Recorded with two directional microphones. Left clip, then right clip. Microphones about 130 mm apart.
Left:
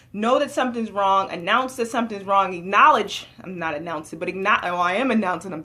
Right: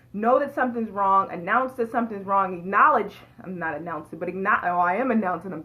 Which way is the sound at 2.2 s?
40° left (ahead or behind).